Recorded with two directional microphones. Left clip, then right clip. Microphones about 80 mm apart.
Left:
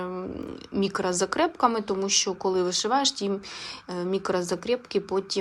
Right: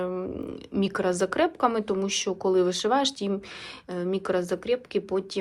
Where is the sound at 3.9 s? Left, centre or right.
Left.